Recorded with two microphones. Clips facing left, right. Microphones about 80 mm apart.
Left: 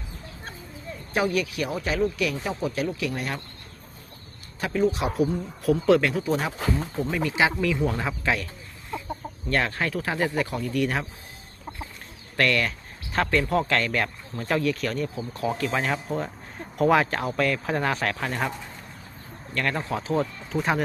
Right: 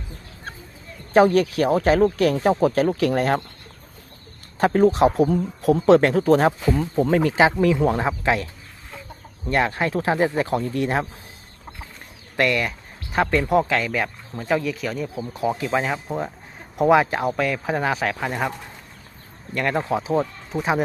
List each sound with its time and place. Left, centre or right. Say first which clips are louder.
1.1 s speech: right 9 dB; right
4.6 s speech: right 8 dB; right
7.3 s speech: right 3 dB; right
9.5 s speech: right 4 dB; centre
12.4 s speech: right 2 dB; centre
15.4 s speech: right 4 dB; centre
19.5 s speech: right 5 dB; right
20.6 s speech: right 3 dB; centre